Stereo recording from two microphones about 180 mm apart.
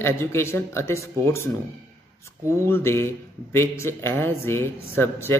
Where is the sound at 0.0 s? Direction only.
15° left (ahead or behind).